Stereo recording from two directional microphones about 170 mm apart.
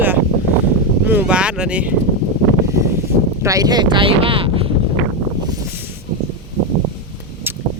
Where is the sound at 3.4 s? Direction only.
20° right (ahead or behind).